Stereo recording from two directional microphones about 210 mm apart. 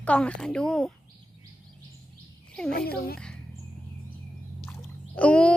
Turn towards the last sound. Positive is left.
turn(degrees=5)  # may be behind; listen again after turning